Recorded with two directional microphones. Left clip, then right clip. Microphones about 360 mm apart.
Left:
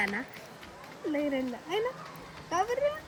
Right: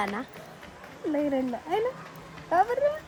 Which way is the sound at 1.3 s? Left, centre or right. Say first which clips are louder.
Right 4 dB; centre.